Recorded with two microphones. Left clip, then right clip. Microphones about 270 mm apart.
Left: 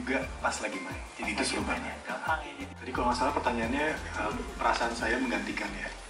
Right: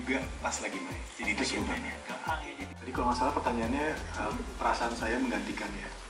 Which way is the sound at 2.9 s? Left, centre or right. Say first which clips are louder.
Left 1 dB; centre.